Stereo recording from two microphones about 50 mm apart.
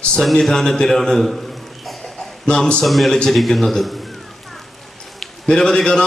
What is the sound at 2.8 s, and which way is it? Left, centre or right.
Speech, centre.